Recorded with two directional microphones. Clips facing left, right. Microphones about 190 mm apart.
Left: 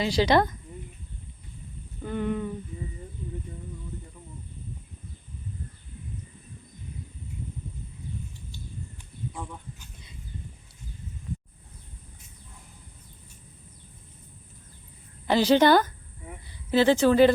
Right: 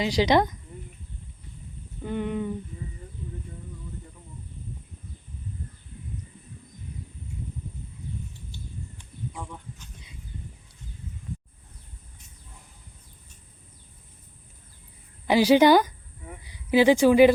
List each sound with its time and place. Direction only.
0.0 s speech: 15° right (ahead or behind)
2.0 s speech: 15° right (ahead or behind)
9.3 s a sound: 5° left (ahead or behind)
15.3 s speech: 10° right (ahead or behind)